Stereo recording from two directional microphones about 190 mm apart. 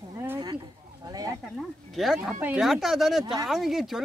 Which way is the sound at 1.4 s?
Centre (ahead or behind).